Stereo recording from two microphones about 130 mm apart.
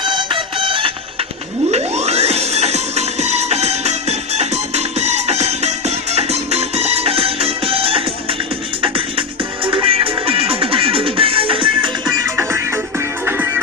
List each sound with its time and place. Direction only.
0.0 s music: 35° right (ahead or behind)
1.7 s music: 55° right (ahead or behind)
12.2 s music: 20° right (ahead or behind)